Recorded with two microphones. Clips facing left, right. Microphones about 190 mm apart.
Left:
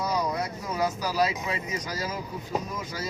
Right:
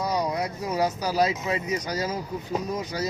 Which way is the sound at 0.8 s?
40° right (ahead or behind).